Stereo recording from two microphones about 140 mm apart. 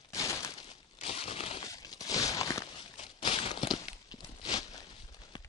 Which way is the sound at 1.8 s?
25° left (ahead or behind).